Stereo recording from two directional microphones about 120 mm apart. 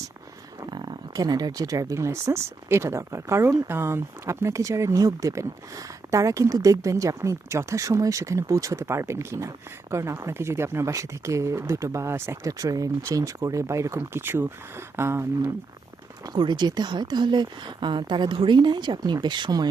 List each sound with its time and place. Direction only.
0.6 s speech: 40° right (ahead or behind); by 15.4 s 20° right (ahead or behind)
16.2 s speech: 35° right (ahead or behind)